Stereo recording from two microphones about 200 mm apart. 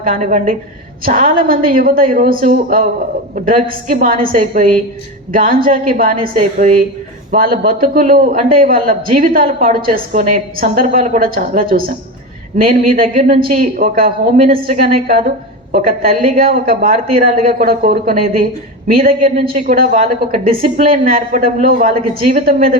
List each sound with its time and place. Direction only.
0.0 s a man's voice: 45° right (ahead or behind)